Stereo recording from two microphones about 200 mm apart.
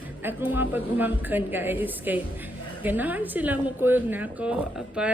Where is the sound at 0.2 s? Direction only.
10° right (ahead or behind).